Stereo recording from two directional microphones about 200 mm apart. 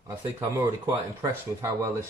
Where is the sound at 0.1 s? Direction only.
15° right (ahead or behind).